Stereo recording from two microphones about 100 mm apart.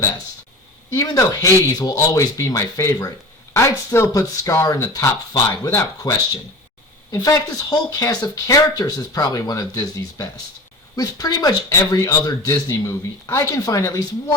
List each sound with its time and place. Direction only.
0.9 s speech: 35° left (ahead or behind)